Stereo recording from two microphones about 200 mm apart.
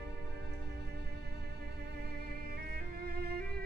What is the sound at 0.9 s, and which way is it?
Music, 55° right (ahead or behind).